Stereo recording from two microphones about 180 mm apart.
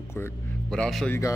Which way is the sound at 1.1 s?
15° left (ahead or behind).